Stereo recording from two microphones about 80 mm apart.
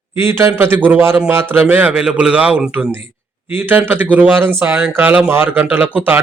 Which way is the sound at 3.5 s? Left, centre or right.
Right.